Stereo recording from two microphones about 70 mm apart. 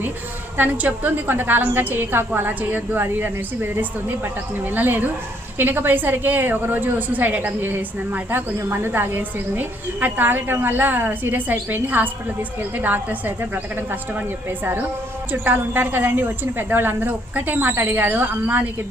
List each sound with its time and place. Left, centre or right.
0.5 s a woman's voice: right